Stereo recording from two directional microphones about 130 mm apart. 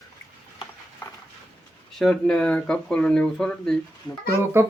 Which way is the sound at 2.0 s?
5° left (ahead or behind).